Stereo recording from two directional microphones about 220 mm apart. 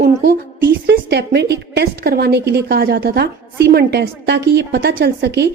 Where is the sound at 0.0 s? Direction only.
45° right (ahead or behind).